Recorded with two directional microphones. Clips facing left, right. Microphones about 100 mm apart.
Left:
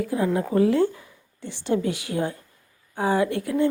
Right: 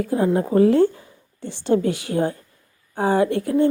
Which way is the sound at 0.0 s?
35° right (ahead or behind).